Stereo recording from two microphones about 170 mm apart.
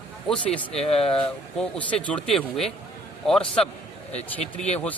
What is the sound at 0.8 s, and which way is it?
Speech, 35° left (ahead or behind).